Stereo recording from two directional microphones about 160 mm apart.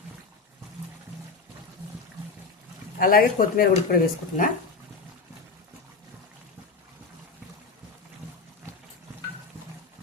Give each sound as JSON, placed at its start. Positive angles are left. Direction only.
{"t": 3.0, "sound": "speech", "side_deg": 60}